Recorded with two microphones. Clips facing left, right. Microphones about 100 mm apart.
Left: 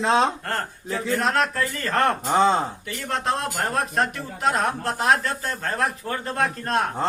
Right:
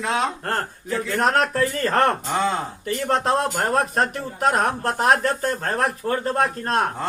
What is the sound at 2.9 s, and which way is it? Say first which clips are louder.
Speech: right 9 dB; 40° right (ahead or behind).